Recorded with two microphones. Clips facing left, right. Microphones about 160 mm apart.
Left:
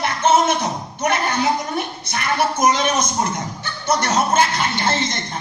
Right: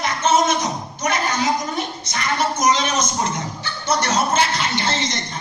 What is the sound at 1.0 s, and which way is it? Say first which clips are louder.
A woman's voice: left 2 dB; 60° left (ahead or behind).